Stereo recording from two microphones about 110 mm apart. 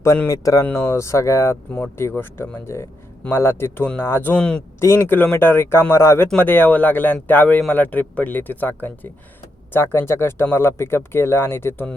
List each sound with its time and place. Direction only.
0.3 s speech: 30° left (ahead or behind); by 4.6 s 10° left (ahead or behind)
4.8 s speech: 20° left (ahead or behind)